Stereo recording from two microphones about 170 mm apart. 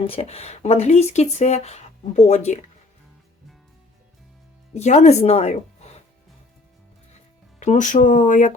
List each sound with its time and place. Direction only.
0.1 s speech: 40° left (ahead or behind)
4.7 s speech: 40° left (ahead or behind)
7.6 s speech: 45° left (ahead or behind)